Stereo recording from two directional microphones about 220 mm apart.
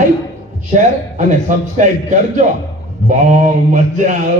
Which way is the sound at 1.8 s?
35° right (ahead or behind).